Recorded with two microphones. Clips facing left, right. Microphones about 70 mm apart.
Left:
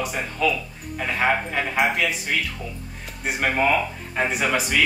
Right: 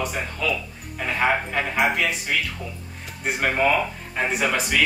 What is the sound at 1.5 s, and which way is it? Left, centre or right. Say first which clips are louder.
Speech: even; centre.